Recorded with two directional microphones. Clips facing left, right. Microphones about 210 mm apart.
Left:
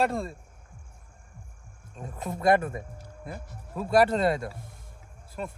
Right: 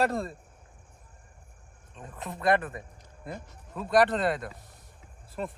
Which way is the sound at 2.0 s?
45° left (ahead or behind).